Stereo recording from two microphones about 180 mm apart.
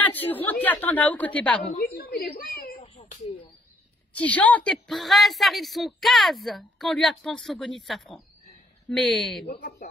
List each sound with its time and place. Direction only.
0.0 s a woman's voice: 10° left (ahead or behind)
1.8 s speech: 55° left (ahead or behind)
4.1 s a woman's voice: 10° left (ahead or behind)
9.5 s speech: 60° left (ahead or behind)